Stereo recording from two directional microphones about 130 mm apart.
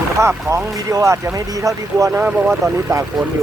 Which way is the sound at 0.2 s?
25° right (ahead or behind).